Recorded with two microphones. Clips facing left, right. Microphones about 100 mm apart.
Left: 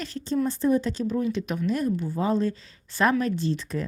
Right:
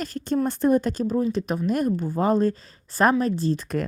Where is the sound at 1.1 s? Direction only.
35° right (ahead or behind).